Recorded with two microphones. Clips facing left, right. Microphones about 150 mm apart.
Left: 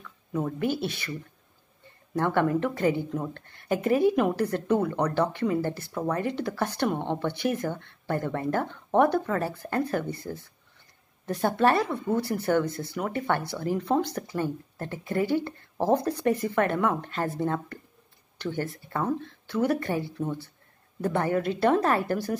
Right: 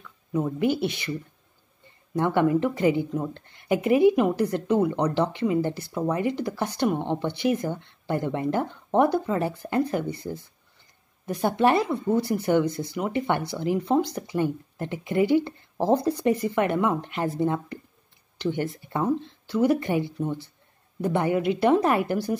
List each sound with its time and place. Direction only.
0.5 s speech: 15° right (ahead or behind)
2.1 s speech: 15° right (ahead or behind)